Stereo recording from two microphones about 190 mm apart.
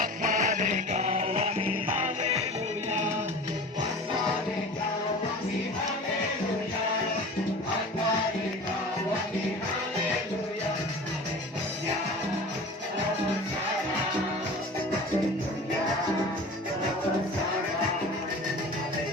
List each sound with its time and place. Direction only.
0.0 s music: 45° right (ahead or behind)